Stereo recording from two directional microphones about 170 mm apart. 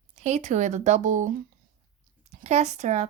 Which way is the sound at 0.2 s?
45° right (ahead or behind).